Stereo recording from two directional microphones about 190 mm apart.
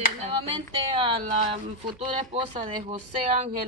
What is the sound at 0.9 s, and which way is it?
Speech, 25° right (ahead or behind).